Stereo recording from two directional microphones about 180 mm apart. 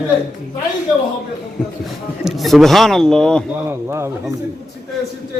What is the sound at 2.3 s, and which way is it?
Speech, centre (ahead or behind).